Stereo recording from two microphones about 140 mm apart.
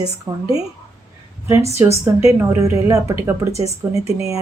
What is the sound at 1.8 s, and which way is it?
Speech, 20° right (ahead or behind).